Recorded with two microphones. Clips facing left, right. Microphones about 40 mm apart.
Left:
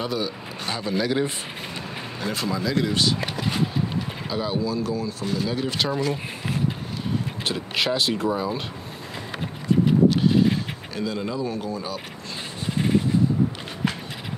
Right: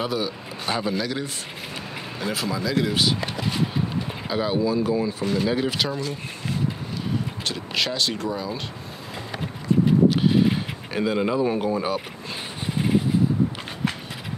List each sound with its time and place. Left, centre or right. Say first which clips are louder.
0.0 s speech: right 1 dB; centre
0.9 s speech: left 4 dB; centre
2.1 s speech: even; centre
4.3 s speech: right 4 dB; centre
5.7 s speech: left 2 dB; centre
7.4 s speech: left 3 dB; centre
8.3 s speech: left 3 dB; left
11.0 s speech: right 5 dB; right